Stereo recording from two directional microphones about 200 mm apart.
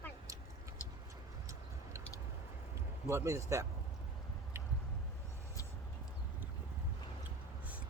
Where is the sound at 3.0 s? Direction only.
15° right (ahead or behind).